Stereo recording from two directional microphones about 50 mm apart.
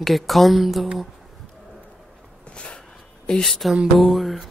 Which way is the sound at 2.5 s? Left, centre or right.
Left.